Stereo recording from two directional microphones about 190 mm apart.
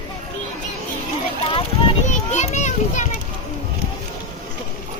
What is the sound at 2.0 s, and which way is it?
Children playing, 40° left (ahead or behind).